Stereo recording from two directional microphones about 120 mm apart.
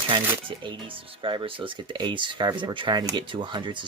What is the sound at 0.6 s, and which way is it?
Speech, 45° right (ahead or behind).